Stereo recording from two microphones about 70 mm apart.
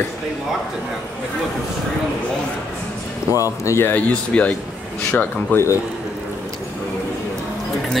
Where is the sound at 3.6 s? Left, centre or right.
Left.